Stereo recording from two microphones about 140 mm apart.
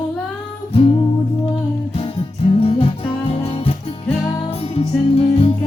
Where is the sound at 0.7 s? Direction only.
40° left (ahead or behind).